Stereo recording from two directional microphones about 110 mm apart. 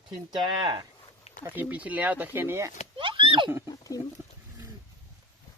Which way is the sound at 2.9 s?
50° right (ahead or behind).